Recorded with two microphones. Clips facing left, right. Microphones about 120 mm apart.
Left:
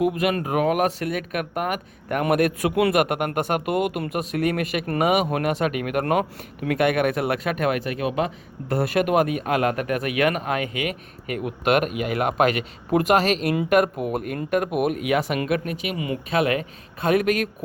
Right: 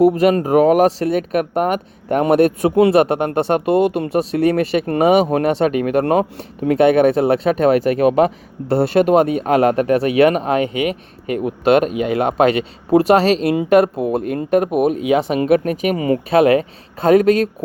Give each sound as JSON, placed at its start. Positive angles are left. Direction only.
{"t": 0.0, "sound": "speech", "side_deg": -35}
{"t": 8.7, "sound": "speech", "side_deg": -30}
{"t": 15.6, "sound": "speech", "side_deg": -45}